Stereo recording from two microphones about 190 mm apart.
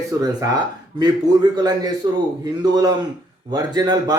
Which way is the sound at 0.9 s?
20° right (ahead or behind).